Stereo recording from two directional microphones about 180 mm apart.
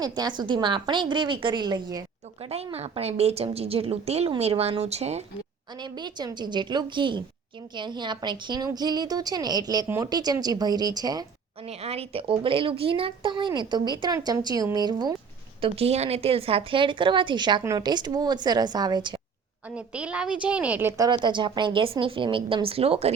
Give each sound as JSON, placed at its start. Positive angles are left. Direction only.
{"t": 0.0, "sound": "speech", "side_deg": -25}
{"t": 2.7, "sound": "a woman's voice", "side_deg": -35}
{"t": 5.8, "sound": "speech", "side_deg": -25}
{"t": 11.6, "sound": "speech", "side_deg": -35}
{"t": 15.6, "sound": "speech", "side_deg": -35}
{"t": 19.7, "sound": "a woman's voice", "side_deg": -5}
{"t": 21.1, "sound": "speech", "side_deg": -25}